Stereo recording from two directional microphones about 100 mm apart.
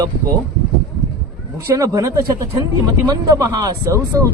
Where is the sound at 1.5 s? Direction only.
35° right (ahead or behind).